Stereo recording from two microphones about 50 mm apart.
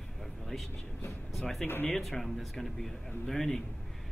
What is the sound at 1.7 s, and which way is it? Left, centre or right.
Speech, left.